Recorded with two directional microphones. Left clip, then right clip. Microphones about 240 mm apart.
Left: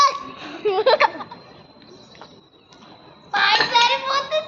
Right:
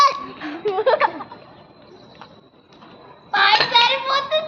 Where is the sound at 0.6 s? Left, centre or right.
Left.